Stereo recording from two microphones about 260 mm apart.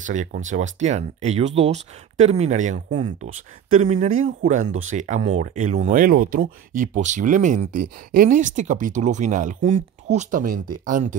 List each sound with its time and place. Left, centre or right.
0.0 s speech: right